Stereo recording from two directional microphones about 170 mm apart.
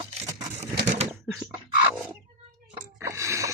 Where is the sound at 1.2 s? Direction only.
5° right (ahead or behind).